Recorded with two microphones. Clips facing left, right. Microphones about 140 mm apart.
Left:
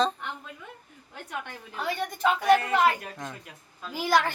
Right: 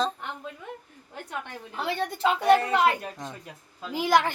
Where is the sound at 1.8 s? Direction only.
30° right (ahead or behind).